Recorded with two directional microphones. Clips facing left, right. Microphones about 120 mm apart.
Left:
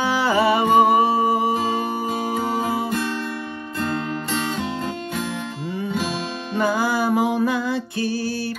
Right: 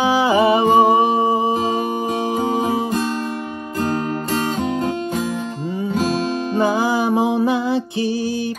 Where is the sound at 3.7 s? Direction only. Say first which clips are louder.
Right 4 dB; 40° right (ahead or behind).